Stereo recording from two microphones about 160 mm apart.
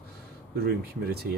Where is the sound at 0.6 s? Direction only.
80° right.